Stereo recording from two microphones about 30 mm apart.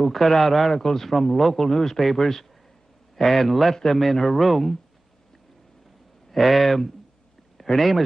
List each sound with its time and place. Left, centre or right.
0.0 s a man's voice: centre
1.7 s a man's voice: centre
2.0 s a man's voice: centre
3.7 s a man's voice: centre
6.3 s a man's voice: centre
7.5 s a sound: centre